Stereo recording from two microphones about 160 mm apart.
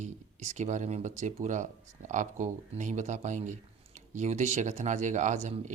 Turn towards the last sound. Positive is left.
turn(degrees=-45)  # may be behind; listen again after turning